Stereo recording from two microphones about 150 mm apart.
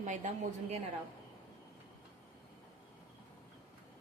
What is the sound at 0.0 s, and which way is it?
Speech, 55° right (ahead or behind).